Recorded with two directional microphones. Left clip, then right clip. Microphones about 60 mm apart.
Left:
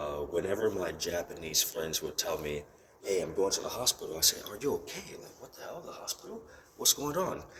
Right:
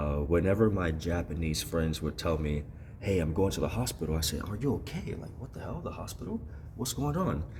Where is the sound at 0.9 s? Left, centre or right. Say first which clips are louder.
Even; right.